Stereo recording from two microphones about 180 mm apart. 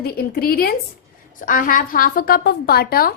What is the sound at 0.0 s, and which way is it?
A woman's voice, 60° left (ahead or behind).